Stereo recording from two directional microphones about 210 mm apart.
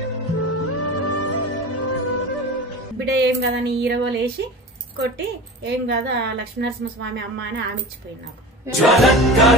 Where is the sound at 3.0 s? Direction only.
55° right (ahead or behind).